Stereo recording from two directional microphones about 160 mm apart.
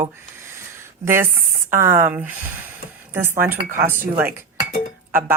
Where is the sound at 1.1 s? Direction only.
15° right (ahead or behind).